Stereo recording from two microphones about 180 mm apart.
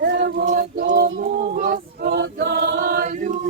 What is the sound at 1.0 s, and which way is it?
Female singing, 75° right (ahead or behind).